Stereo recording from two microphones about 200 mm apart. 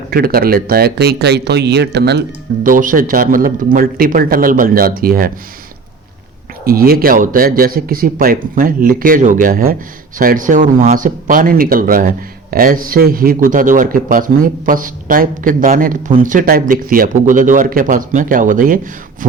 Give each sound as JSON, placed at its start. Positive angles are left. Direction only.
{"t": 0.1, "sound": "speech", "side_deg": -50}
{"t": 2.6, "sound": "speech", "side_deg": -40}
{"t": 6.7, "sound": "speech", "side_deg": -50}